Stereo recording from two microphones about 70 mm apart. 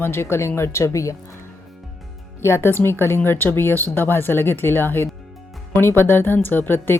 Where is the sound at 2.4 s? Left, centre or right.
Left.